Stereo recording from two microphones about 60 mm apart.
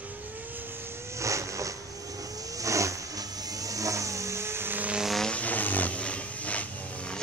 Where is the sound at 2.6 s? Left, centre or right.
Right.